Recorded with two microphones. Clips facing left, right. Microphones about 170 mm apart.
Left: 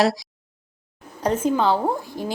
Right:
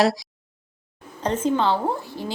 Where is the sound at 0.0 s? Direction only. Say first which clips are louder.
Even; centre (ahead or behind).